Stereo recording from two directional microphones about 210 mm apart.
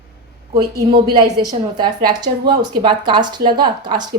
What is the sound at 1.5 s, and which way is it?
Speech, 20° right (ahead or behind).